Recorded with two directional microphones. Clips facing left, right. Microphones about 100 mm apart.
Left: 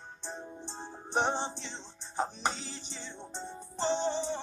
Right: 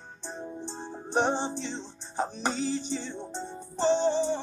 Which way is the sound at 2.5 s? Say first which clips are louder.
Right 13 dB; 50° right (ahead or behind).